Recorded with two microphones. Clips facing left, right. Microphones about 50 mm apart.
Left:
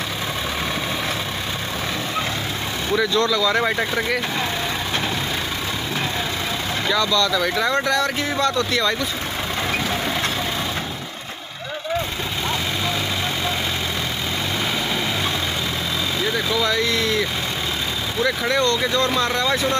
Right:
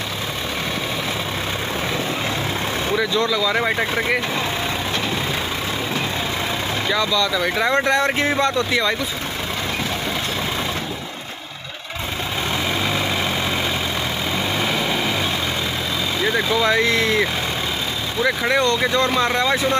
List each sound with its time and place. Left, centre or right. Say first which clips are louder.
2.9 s speech: left 2 dB; centre
6.9 s speech: left 1 dB; centre
16.2 s speech: right 3 dB; centre; by 17.3 s right
18.2 s speech: right 2 dB; centre